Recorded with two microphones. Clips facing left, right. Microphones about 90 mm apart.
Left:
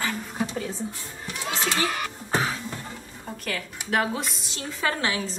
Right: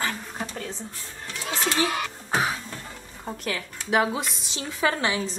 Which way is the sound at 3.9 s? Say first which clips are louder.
Right 2 dB; 5° right (ahead or behind).